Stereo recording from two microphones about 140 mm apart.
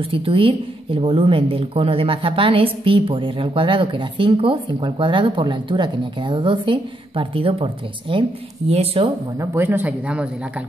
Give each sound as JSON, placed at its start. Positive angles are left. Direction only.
{"t": 0.0, "sound": "a woman's voice", "side_deg": -40}
{"t": 9.4, "sound": "speech", "side_deg": -20}